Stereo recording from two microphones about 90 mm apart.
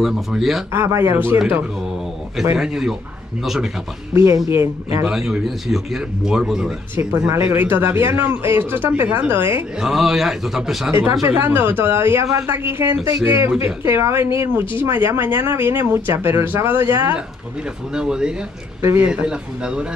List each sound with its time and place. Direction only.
0.0 s speech: 5° right (ahead or behind)
0.7 s a woman's voice: 30° right (ahead or behind)
2.5 s speech: 10° right (ahead or behind)
4.1 s speech: 30° right (ahead or behind)
5.0 s speech: 5° right (ahead or behind)
7.0 s a woman's voice: 30° right (ahead or behind)
9.8 s speech: 5° right (ahead or behind)
10.9 s a woman's voice: 25° right (ahead or behind)
17.9 s speech: 10° right (ahead or behind)
18.8 s speech: 30° right (ahead or behind)
19.0 s speech: 10° right (ahead or behind)